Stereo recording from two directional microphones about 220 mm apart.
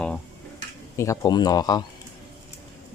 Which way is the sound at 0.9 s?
15° left (ahead or behind).